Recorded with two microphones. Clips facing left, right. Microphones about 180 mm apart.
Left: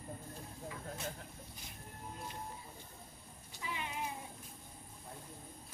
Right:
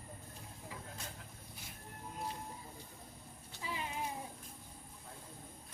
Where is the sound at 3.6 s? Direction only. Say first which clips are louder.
Right 1 dB; 30° right (ahead or behind).